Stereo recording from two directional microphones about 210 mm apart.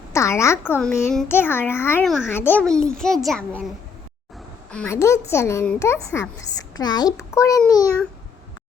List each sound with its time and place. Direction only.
0.1 s a child's voice: 15° left (ahead or behind)
4.7 s a child's voice: 10° left (ahead or behind)